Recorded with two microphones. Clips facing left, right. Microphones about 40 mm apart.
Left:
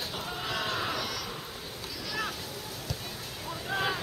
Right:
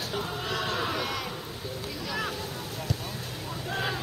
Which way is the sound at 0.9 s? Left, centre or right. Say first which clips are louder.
Right 3 dB; right.